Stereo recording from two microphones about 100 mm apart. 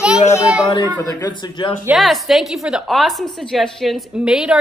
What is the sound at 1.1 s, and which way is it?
Speech, 45° left (ahead or behind).